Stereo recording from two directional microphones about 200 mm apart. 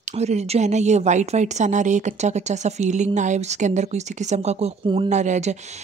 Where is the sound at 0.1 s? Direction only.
35° right (ahead or behind).